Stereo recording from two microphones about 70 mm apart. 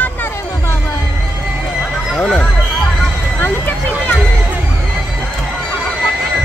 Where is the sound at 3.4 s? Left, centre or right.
Left.